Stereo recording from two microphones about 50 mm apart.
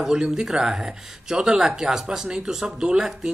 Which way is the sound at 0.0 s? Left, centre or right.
Centre.